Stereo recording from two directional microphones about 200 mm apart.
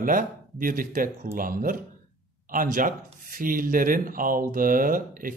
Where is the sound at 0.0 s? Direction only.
45° right (ahead or behind).